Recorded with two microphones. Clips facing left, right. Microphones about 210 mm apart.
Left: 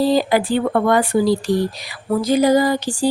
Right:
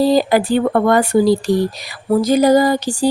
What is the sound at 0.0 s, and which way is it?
Speech, 40° right (ahead or behind).